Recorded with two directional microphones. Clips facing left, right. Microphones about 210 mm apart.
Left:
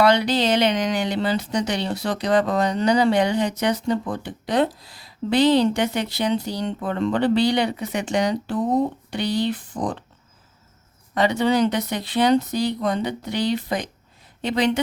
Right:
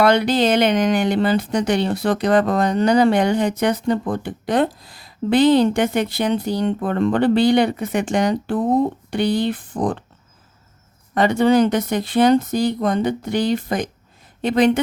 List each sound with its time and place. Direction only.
0.0 s speech: 50° right (ahead or behind)
11.1 s speech: 50° right (ahead or behind)